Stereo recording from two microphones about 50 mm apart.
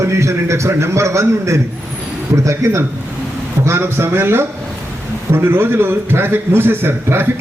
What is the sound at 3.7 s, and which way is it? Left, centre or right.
A man's voice, right.